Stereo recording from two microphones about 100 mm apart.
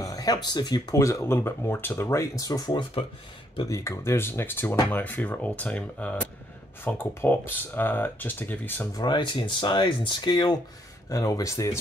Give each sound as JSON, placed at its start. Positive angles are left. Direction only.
{"t": 0.0, "sound": "speech", "side_deg": 40}
{"t": 0.9, "sound": "speech", "side_deg": 30}
{"t": 2.7, "sound": "speech", "side_deg": 60}
{"t": 3.6, "sound": "speech", "side_deg": 35}
{"t": 8.9, "sound": "speech", "side_deg": 45}
{"t": 11.1, "sound": "speech", "side_deg": 35}